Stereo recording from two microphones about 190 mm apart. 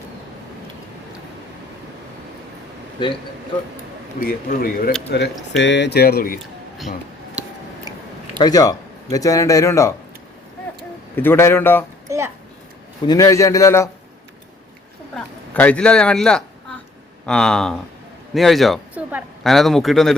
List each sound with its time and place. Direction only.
3.0 s speech: 25° left (ahead or behind)
4.3 s speech: 50° left (ahead or behind)
5.1 s speech: 65° left (ahead or behind); by 6.4 s 50° left (ahead or behind)
7.9 s a sound: 20° right (ahead or behind)
8.4 s a man's voice: 20° left (ahead or behind)
11.1 s a man's voice: 10° left (ahead or behind)
12.0 s a child's voice: 15° right (ahead or behind)
13.1 s a man's voice: 15° left (ahead or behind)
15.1 s speech: 5° left (ahead or behind)